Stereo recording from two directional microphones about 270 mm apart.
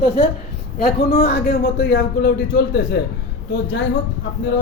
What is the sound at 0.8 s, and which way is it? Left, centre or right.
A man's voice, left.